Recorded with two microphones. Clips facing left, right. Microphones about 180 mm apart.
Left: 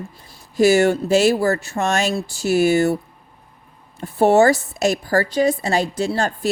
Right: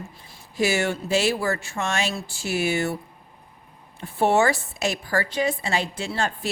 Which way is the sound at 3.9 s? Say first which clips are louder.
Left 6 dB; 40° left (ahead or behind).